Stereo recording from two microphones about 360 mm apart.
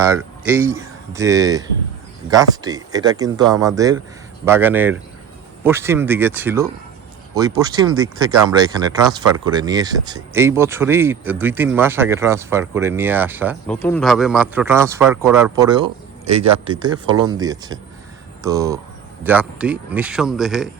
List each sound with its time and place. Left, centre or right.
0.0 s speech: centre